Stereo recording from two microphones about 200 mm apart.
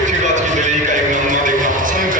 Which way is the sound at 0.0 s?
40° right (ahead or behind).